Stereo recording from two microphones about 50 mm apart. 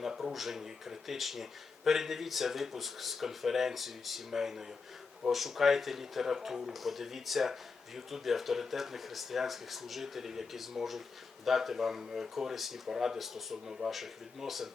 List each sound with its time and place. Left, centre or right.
0.0 s speech: centre